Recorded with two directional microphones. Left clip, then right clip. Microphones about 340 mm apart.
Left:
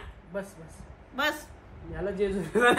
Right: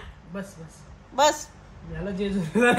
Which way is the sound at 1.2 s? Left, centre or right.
Centre.